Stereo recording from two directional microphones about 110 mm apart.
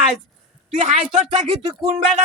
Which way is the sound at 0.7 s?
90° right.